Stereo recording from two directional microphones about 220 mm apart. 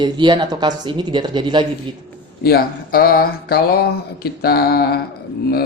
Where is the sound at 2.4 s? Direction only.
45° left (ahead or behind).